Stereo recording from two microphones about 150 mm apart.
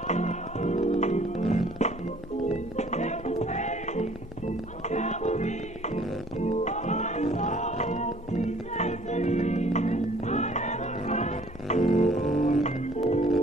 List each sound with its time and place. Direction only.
0.1 s music: 50° left (ahead or behind)
12.6 s organ: 50° left (ahead or behind)